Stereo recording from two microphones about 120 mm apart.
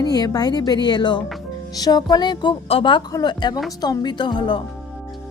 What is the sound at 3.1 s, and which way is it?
Speech, 35° left (ahead or behind).